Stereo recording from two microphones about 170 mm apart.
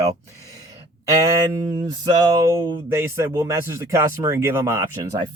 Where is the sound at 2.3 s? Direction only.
15° right (ahead or behind).